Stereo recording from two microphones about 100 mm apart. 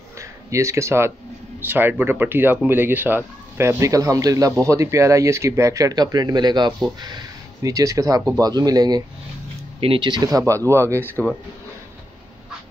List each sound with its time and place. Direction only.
0.2 s speech: 30° right (ahead or behind)
9.8 s speech: 60° right (ahead or behind)
10.3 s speech: 30° right (ahead or behind)